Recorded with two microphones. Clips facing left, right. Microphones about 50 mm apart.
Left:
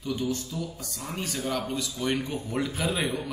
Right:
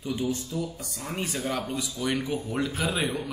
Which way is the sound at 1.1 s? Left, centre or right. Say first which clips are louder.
Right 1 dB; centre.